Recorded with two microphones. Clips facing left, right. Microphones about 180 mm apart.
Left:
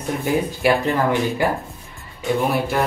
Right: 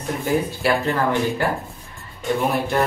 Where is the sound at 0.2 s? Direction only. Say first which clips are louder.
Left 1 dB; 15° left (ahead or behind).